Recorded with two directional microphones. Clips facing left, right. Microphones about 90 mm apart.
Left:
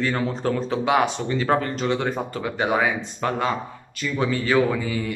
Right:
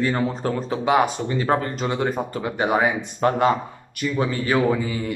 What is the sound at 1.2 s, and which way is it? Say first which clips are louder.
Speech: even; 20° right (ahead or behind).